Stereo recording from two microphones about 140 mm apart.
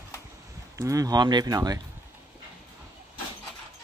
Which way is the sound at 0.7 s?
25° right (ahead or behind).